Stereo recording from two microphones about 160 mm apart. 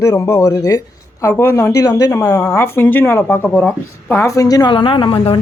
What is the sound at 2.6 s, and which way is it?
A woman's voice, 15° left (ahead or behind).